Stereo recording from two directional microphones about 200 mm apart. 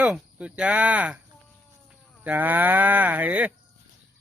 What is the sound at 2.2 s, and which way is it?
Speech, 10° right (ahead or behind).